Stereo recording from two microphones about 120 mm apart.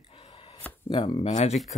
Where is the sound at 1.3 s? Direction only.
70° left (ahead or behind).